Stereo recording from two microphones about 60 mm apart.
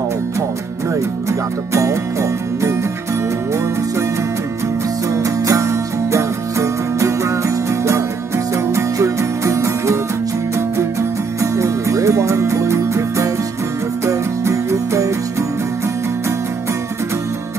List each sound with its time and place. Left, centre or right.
1.7 s music: right
5.1 s music: right
11.5 s music: right